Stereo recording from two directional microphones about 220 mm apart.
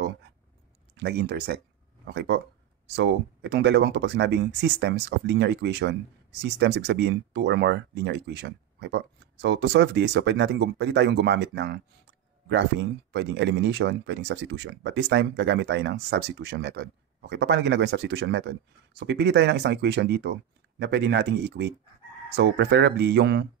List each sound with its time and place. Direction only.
0.9 s speech: 50° right (ahead or behind)
13.1 s speech: 50° right (ahead or behind)